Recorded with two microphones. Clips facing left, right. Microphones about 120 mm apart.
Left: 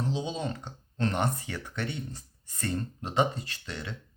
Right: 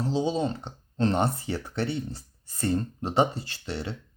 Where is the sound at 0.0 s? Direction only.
35° right (ahead or behind).